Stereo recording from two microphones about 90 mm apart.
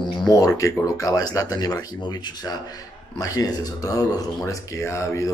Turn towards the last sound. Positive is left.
turn(degrees=35)  # may be behind; listen again after turning